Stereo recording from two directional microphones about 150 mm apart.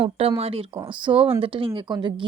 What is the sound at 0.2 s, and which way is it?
Speech, 40° right (ahead or behind).